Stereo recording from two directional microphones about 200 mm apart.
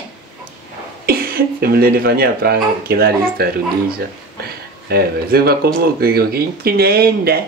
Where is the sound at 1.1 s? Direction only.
50° right (ahead or behind).